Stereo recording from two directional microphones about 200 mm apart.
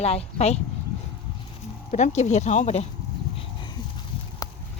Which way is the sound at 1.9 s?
35° left (ahead or behind).